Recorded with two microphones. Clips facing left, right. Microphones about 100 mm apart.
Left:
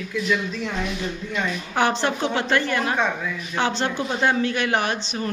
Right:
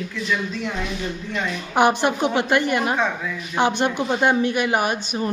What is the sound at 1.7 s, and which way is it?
A woman's voice, 15° right (ahead or behind).